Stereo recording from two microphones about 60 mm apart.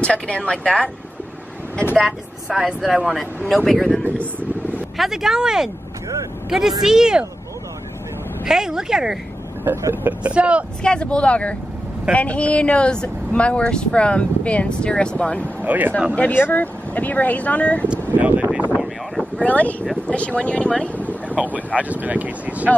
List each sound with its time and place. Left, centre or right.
0.0 s speech: centre
2.0 s speech: centre
2.6 s speech: centre
3.4 s speech: centre
4.9 s speech: centre
8.5 s speech: centre
9.7 s speech: right
10.0 s speech: right
10.8 s speech: centre
15.6 s speech: right
16.2 s speech: left
17.8 s speech: right
19.3 s speech: left
21.7 s speech: right